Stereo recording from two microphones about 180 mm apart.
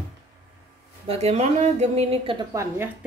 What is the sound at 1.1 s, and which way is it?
Speech, 35° right (ahead or behind).